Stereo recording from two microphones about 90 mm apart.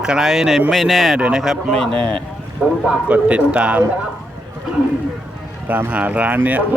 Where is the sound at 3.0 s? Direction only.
15° right (ahead or behind).